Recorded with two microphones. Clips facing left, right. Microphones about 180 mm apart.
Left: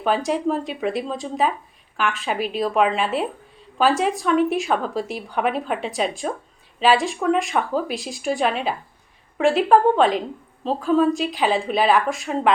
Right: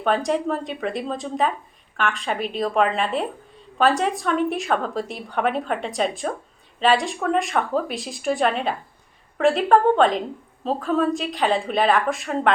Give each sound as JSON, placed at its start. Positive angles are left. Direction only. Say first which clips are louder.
{"t": 0.0, "sound": "a woman's voice", "louder": "even", "side_deg": 0}